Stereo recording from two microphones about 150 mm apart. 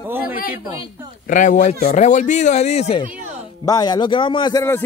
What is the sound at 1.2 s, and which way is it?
Speech, 60° left (ahead or behind).